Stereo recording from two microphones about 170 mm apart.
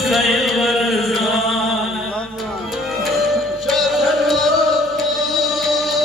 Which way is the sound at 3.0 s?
Centre (ahead or behind).